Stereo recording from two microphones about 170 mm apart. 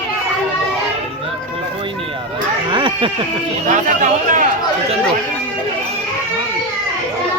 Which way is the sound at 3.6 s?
45° right (ahead or behind).